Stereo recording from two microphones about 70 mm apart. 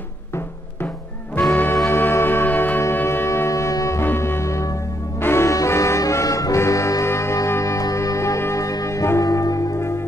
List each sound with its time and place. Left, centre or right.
1.5 s music: left
2.8 s shofar: left
3.7 s music: left
4.0 s music: left
5.2 s brass instrument: left
8.4 s music: left